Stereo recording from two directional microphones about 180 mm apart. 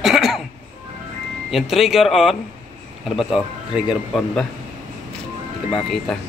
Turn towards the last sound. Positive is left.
turn(degrees=0)  # may be behind; listen again after turning